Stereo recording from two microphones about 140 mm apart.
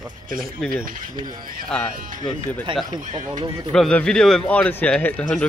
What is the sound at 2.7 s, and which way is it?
Speech, 35° right (ahead or behind).